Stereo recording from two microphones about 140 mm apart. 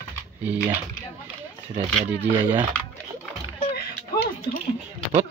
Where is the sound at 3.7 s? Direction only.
90° left.